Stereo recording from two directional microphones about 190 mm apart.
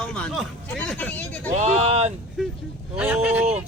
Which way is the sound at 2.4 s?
Centre (ahead or behind).